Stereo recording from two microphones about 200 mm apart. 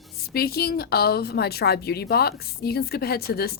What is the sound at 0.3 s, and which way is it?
Speech, 50° left (ahead or behind).